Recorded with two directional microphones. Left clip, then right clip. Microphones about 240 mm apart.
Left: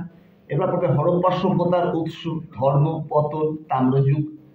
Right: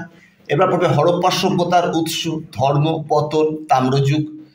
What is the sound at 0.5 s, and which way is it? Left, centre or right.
A man's voice, right.